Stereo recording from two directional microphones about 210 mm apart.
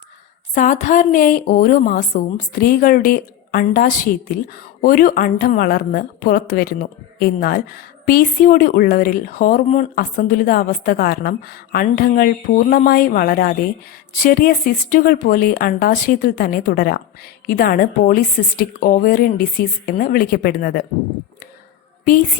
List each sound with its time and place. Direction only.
0.5 s a woman's voice: 35° left (ahead or behind)